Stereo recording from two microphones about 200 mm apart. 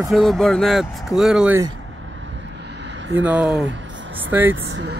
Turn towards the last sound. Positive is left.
turn(degrees=-55)  # may be behind; listen again after turning